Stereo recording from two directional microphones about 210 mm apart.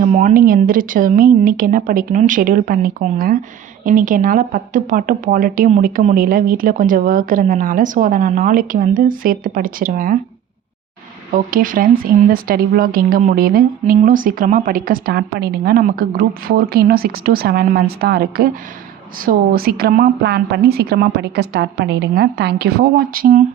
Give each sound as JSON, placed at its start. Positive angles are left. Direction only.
{"t": 0.1, "sound": "speech", "side_deg": -40}
{"t": 11.3, "sound": "speech", "side_deg": -40}